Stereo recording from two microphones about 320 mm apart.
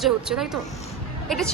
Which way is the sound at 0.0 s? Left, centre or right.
Centre.